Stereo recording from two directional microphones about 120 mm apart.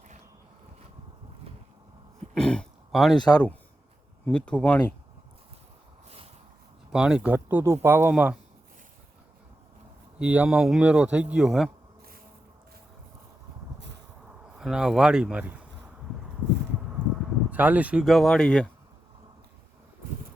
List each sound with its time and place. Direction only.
2.3 s throat clearing: 5° left (ahead or behind)
3.2 s a man's voice: 35° left (ahead or behind)
4.3 s speech: 10° left (ahead or behind)
6.9 s speech: 5° right (ahead or behind)
7.3 s speech: 20° right (ahead or behind)
10.2 s speech: 10° right (ahead or behind)
14.5 s speech: 5° right (ahead or behind)
17.5 s speech: 15° right (ahead or behind); by 18.7 s 5° left (ahead or behind)